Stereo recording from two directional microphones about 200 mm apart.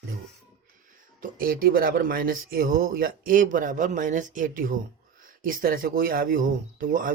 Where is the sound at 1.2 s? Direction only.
45° right (ahead or behind).